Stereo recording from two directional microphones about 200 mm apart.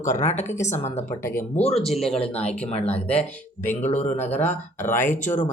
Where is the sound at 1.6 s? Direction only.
30° left (ahead or behind).